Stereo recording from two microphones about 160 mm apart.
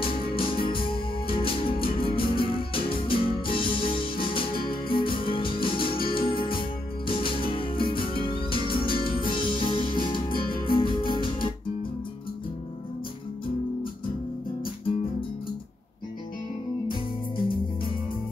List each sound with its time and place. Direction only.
0.0 s music: 35° left (ahead or behind)
10.3 s music: 65° left (ahead or behind)
10.8 s music: 35° left (ahead or behind)